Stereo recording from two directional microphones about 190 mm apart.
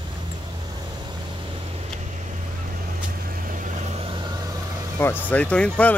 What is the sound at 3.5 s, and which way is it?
Vehicle, 45° right (ahead or behind).